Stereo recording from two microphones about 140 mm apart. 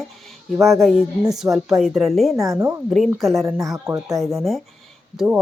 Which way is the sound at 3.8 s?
20° right (ahead or behind).